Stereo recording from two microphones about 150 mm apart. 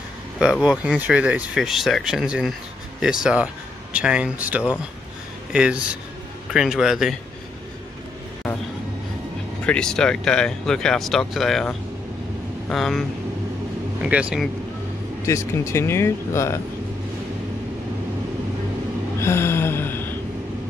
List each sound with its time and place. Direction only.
0.4 s speech: 5° right (ahead or behind)
9.7 s speech: 5° left (ahead or behind)
14.0 s speech: 5° right (ahead or behind)
15.2 s speech: 20° left (ahead or behind)
19.1 s gasp: 15° left (ahead or behind)